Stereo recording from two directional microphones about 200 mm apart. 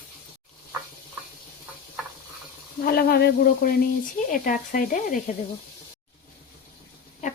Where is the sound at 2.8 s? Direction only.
50° left (ahead or behind).